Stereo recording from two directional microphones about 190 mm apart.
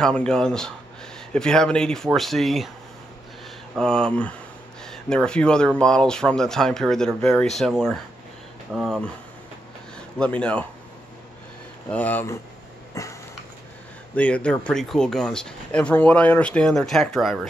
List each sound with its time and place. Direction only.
0.0 s speech: 5° left (ahead or behind)
3.7 s speech: 5° left (ahead or behind)
11.9 s speech: 10° left (ahead or behind)
13.0 s a sound: 15° left (ahead or behind)
14.1 s speech: 5° left (ahead or behind)